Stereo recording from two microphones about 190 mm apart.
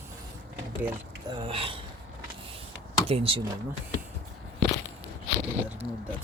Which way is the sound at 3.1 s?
30° right (ahead or behind).